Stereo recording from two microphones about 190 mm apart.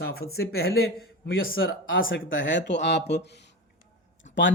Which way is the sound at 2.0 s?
85° left.